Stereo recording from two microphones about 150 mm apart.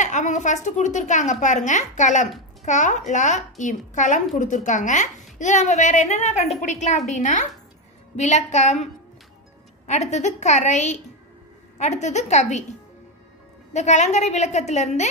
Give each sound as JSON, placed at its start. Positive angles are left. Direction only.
{"t": 0.0, "sound": "a woman's voice", "side_deg": 55}
{"t": 9.8, "sound": "a woman's voice", "side_deg": 50}
{"t": 13.7, "sound": "a woman's voice", "side_deg": 50}